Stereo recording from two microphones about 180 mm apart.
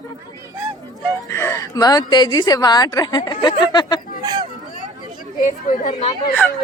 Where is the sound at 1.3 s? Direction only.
15° left (ahead or behind).